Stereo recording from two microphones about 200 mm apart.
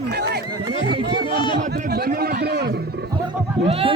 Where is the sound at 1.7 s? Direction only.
50° right (ahead or behind).